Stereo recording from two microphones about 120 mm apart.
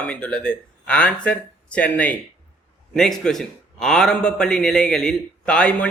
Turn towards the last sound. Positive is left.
turn(degrees=10)  # may be behind; listen again after turning